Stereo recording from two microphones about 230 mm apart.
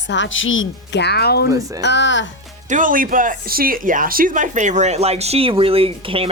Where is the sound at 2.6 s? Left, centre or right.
Right.